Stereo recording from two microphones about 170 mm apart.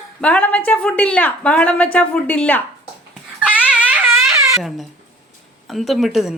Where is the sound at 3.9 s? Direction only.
15° right (ahead or behind).